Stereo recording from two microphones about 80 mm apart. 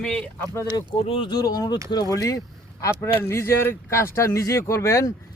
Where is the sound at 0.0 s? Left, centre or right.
Centre.